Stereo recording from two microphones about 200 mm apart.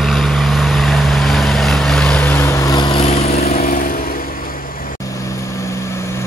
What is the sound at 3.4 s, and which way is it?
Vehicle, 45° left (ahead or behind).